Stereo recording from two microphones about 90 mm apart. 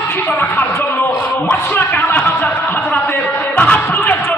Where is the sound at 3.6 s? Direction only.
15° left (ahead or behind).